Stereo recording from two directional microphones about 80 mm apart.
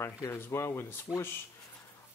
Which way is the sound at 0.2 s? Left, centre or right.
Left.